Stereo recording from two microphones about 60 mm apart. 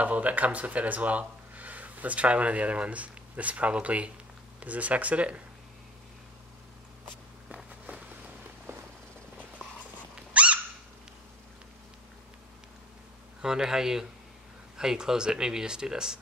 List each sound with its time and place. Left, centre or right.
0.0 s speech: right
8.7 s a sound: right
10.3 s dog: right
13.4 s speech: centre